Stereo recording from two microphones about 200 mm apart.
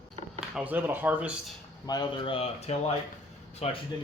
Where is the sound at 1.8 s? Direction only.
20° left (ahead or behind).